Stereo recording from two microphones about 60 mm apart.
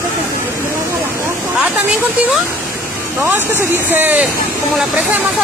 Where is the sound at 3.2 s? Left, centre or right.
Right.